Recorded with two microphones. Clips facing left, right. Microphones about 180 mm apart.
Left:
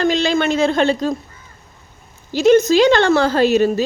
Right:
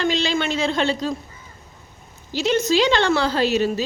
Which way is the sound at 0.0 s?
50° left (ahead or behind).